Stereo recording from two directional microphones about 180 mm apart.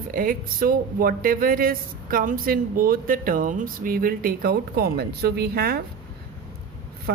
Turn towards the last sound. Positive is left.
turn(degrees=-60)  # may be behind; listen again after turning